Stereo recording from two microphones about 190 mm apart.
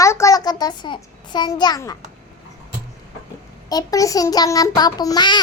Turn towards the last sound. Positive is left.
turn(degrees=20)  # may be behind; listen again after turning